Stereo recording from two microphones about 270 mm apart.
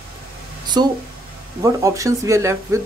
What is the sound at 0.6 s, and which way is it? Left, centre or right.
Speech, centre.